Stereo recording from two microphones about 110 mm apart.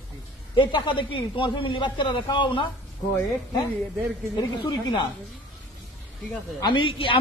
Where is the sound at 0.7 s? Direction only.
45° left (ahead or behind).